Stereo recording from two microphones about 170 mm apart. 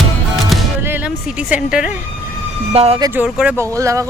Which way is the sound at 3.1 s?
5° right (ahead or behind).